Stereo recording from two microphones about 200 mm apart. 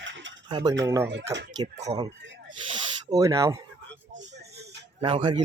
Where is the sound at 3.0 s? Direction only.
15° right (ahead or behind).